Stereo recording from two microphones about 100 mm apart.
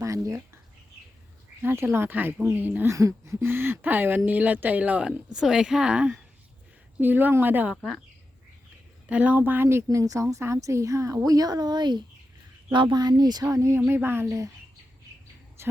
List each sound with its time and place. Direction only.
0.0 s speech: 35° right (ahead or behind)
1.6 s speech: 25° right (ahead or behind)
2.9 s speech: 30° right (ahead or behind)
7.8 s speech: centre (ahead or behind)
9.0 s a woman's voice: 15° right (ahead or behind); by 14.5 s 30° right (ahead or behind)
15.6 s a sound: 25° right (ahead or behind)